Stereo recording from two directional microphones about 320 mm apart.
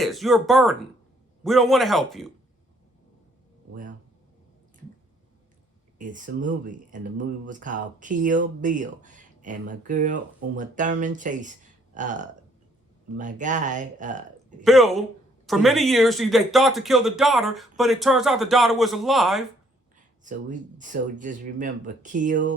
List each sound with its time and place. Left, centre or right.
0.0 s speech: centre
6.0 s speech: right
14.6 s speech: centre
20.2 s speech: right